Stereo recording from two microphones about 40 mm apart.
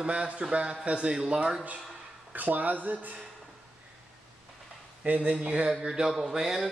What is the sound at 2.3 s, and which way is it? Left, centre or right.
Speech, right.